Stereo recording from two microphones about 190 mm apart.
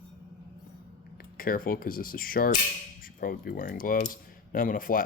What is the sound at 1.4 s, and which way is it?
Speech, 50° left (ahead or behind).